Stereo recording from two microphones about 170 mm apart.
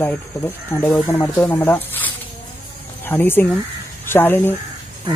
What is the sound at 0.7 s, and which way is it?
Speech, 10° left (ahead or behind).